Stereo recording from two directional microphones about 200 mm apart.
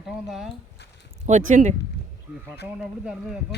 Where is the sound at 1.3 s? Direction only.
40° right (ahead or behind).